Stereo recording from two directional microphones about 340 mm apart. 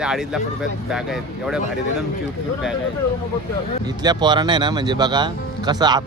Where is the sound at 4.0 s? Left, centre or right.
Centre.